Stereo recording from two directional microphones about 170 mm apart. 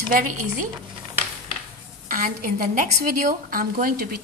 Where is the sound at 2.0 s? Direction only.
50° right (ahead or behind).